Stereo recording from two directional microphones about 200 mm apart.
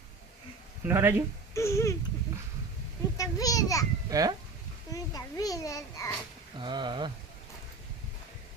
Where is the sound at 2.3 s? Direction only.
15° right (ahead or behind).